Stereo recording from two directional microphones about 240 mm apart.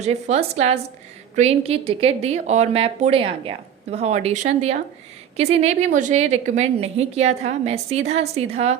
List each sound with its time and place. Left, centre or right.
0.0 s a woman's voice: right